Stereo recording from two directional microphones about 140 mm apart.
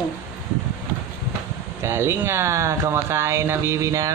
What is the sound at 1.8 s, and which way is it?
Speech, 20° right (ahead or behind).